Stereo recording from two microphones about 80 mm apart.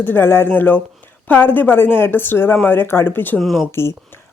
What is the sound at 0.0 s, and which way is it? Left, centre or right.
Speech, left.